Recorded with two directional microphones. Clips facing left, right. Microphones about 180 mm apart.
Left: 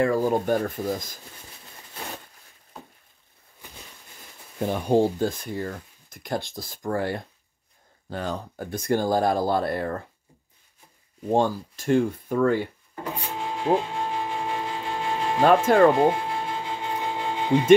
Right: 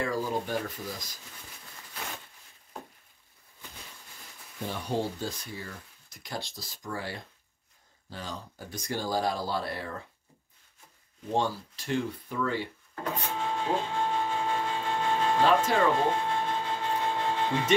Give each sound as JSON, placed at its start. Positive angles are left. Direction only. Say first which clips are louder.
{"t": 0.0, "sound": "speech", "louder": "left 9 dB", "side_deg": 55}
{"t": 4.6, "sound": "speech", "louder": "left 10 dB", "side_deg": 50}
{"t": 11.2, "sound": "speech", "louder": "left 7 dB", "side_deg": 50}
{"t": 12.9, "sound": "printer", "louder": "even", "side_deg": 10}
{"t": 15.6, "sound": "speech", "louder": "left 9 dB", "side_deg": 50}
{"t": 16.0, "sound": "a sound", "louder": "left 6 dB", "side_deg": 10}